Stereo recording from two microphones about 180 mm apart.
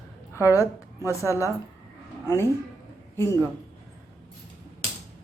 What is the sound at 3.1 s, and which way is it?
Speech, 15° left (ahead or behind).